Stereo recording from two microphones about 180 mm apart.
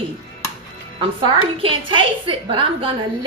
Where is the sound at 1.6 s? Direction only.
30° right (ahead or behind).